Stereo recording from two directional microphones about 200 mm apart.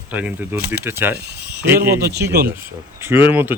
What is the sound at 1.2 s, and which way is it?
Speech, 55° right (ahead or behind).